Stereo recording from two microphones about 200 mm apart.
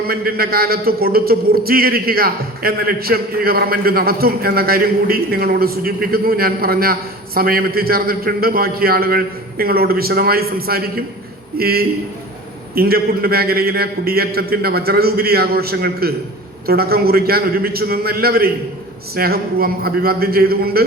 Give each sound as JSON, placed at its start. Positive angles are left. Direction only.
{"t": 0.1, "sound": "a man's voice", "side_deg": -50}